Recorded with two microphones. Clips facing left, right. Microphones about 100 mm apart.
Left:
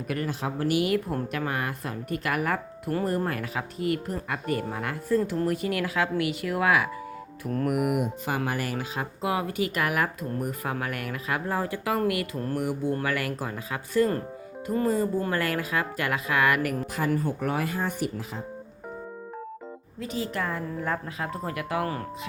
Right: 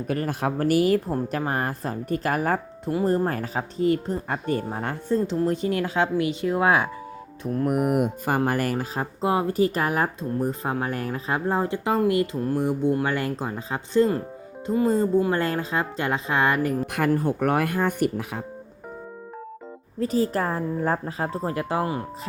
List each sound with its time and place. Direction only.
0.3 s speech: 50° right (ahead or behind); by 7.9 s 30° right (ahead or behind)
7.9 s speech: 50° right (ahead or behind); by 16.8 s 25° right (ahead or behind)
16.8 s speech: 60° right (ahead or behind)
20.0 s speech: 40° right (ahead or behind)